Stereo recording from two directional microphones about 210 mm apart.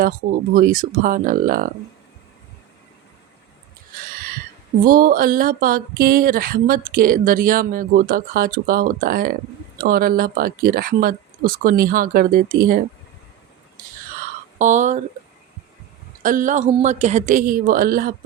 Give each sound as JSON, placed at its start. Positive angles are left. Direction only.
{"t": 0.0, "sound": "a woman's voice", "side_deg": -40}
{"t": 4.1, "sound": "a sound", "side_deg": -45}
{"t": 4.8, "sound": "speech", "side_deg": -40}
{"t": 14.6, "sound": "a woman's voice", "side_deg": -35}
{"t": 16.2, "sound": "a woman's voice", "side_deg": -40}